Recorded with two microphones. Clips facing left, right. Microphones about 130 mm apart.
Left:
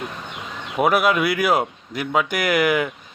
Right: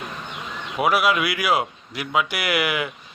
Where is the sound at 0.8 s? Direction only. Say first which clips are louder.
Left 2 dB; 45° left (ahead or behind).